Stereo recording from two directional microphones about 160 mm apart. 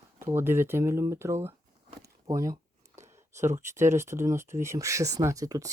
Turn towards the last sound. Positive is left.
turn(degrees=-20)  # may be behind; listen again after turning